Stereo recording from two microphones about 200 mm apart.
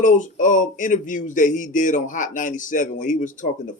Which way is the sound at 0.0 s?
40° left (ahead or behind).